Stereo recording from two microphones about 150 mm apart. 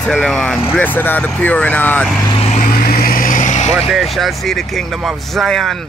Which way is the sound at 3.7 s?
Centre (ahead or behind).